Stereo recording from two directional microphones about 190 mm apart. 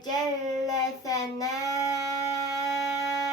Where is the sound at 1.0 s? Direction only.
20° left (ahead or behind).